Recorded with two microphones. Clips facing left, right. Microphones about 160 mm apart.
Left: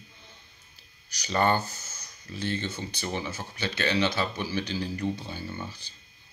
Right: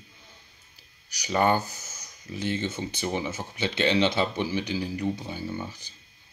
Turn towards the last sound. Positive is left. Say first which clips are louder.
# right 4 dB
turn(degrees=-15)  # may be behind; listen again after turning